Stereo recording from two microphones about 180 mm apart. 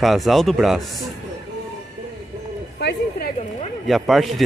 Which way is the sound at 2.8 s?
70° left (ahead or behind).